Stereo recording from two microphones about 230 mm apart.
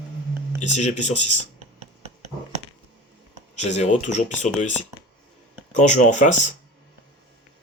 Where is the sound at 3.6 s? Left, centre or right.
Left.